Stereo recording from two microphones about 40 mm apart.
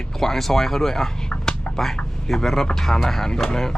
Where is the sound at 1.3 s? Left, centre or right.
Left.